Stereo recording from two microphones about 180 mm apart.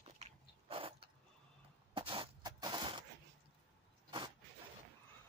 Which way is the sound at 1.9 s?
30° right (ahead or behind).